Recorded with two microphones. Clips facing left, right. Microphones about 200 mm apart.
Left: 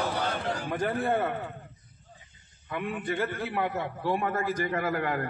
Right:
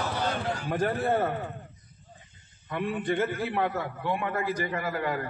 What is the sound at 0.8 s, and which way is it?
Speech, 40° right (ahead or behind).